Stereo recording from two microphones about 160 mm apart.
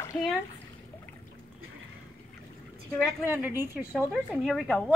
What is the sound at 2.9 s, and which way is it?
A woman's voice, 10° right (ahead or behind).